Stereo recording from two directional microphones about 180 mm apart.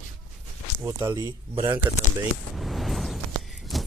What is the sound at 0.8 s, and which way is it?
Speech, 20° right (ahead or behind).